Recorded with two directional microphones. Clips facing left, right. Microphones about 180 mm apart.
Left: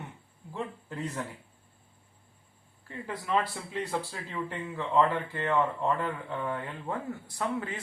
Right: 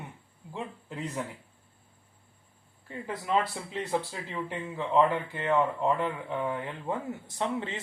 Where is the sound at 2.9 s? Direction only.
20° right (ahead or behind).